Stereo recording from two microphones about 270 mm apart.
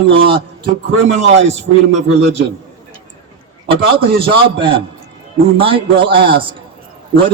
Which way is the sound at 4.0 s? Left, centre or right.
Centre.